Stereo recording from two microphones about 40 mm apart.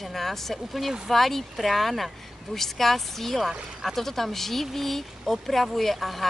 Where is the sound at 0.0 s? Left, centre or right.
Centre.